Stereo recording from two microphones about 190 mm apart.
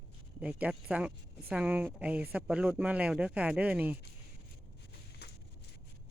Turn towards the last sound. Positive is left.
turn(degrees=60)  # may be behind; listen again after turning